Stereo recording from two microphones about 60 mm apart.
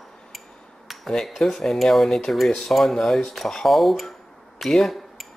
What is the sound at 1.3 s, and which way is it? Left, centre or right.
Speech, centre.